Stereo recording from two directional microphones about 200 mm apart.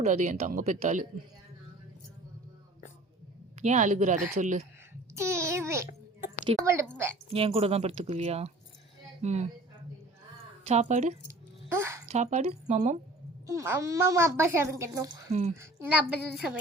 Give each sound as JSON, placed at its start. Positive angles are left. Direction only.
{"t": 0.0, "sound": "speech", "side_deg": -35}
{"t": 3.6, "sound": "speech", "side_deg": -35}
{"t": 5.1, "sound": "a sound", "side_deg": -15}
{"t": 6.6, "sound": "a child's voice", "side_deg": -15}
{"t": 7.3, "sound": "speech", "side_deg": -30}
{"t": 10.7, "sound": "speech", "side_deg": -35}
{"t": 11.3, "sound": "a sound", "side_deg": -10}
{"t": 12.0, "sound": "speech", "side_deg": -35}
{"t": 13.5, "sound": "a child's voice", "side_deg": -15}
{"t": 15.3, "sound": "speech", "side_deg": -35}
{"t": 15.5, "sound": "a child's voice", "side_deg": -10}